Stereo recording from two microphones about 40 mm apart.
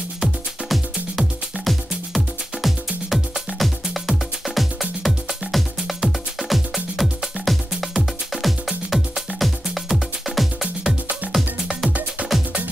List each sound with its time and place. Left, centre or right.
0.2 s music: centre
12.2 s music: right